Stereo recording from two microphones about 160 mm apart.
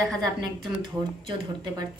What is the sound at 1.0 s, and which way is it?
Speech, 30° right (ahead or behind).